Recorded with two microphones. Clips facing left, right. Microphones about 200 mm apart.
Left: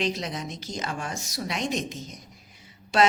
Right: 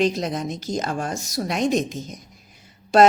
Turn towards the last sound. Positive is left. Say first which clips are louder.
# right 7 dB
turn(degrees=-40)  # may be behind; listen again after turning